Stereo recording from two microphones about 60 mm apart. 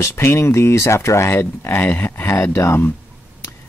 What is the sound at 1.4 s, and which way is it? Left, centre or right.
Speech, left.